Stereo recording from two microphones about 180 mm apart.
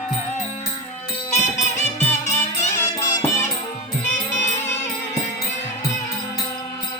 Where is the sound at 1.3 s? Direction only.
40° left (ahead or behind).